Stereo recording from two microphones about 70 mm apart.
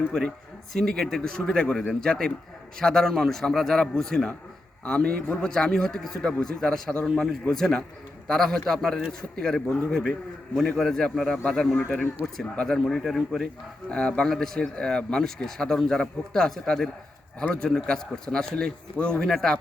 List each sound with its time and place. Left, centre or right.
0.7 s a man's voice: centre
4.9 s a man's voice: centre
11.9 s speech: centre
13.9 s speech: centre